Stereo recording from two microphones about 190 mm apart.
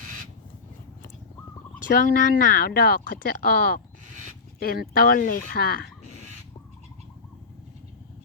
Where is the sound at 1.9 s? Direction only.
50° left (ahead or behind).